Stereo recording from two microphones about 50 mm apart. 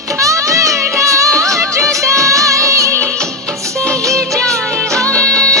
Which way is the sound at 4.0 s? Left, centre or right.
Right.